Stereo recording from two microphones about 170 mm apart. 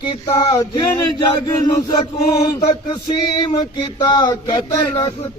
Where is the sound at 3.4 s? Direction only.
25° left (ahead or behind).